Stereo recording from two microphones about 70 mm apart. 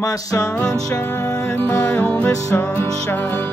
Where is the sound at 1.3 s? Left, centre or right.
Left.